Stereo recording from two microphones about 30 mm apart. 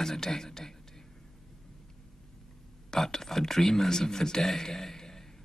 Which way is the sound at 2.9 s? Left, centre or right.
Centre.